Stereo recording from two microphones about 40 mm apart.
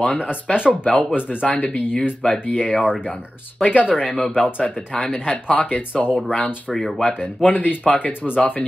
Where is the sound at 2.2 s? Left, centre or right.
Left.